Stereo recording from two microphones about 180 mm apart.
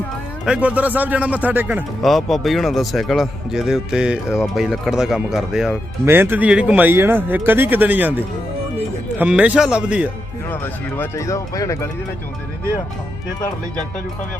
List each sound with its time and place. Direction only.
0.4 s speech: 5° right (ahead or behind)
2.0 s a man's voice: centre (ahead or behind)
10.5 s speech: 10° left (ahead or behind)